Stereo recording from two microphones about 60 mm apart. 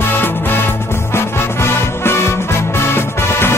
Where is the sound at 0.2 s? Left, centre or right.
Left.